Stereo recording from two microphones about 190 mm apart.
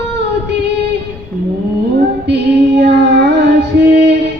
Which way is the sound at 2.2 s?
60° right (ahead or behind).